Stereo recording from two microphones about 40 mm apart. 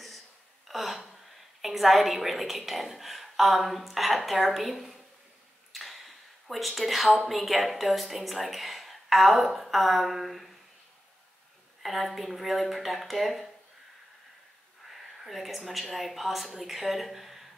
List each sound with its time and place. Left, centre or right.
0.7 s a woman's voice: centre
11.8 s speech: centre
14.9 s a woman's voice: centre